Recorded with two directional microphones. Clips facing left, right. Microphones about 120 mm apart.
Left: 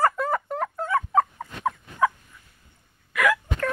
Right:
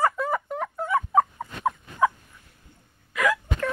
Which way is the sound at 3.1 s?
20° right (ahead or behind).